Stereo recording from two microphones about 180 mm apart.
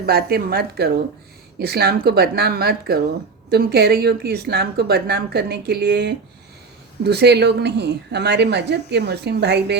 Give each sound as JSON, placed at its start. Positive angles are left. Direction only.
{"t": 0.0, "sound": "a woman's voice", "side_deg": -60}